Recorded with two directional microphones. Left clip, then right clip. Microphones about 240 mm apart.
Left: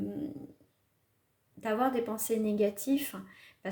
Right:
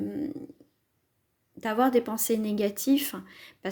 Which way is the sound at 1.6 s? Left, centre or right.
Right.